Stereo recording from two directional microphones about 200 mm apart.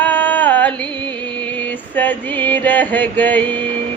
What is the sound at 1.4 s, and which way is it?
Music, 5° left (ahead or behind).